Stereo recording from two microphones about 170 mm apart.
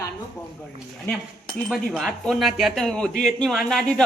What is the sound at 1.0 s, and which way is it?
Speech, 5° left (ahead or behind).